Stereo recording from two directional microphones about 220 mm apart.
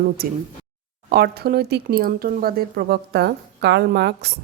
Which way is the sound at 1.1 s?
45° right (ahead or behind).